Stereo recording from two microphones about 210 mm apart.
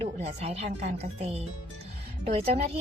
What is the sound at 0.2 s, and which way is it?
A woman's voice, 30° right (ahead or behind).